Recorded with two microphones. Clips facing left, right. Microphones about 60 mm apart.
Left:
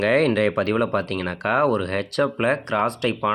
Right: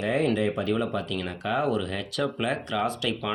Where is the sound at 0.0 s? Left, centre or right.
Left.